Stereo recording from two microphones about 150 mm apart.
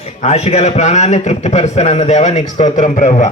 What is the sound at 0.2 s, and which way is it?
A man's voice, 45° left (ahead or behind).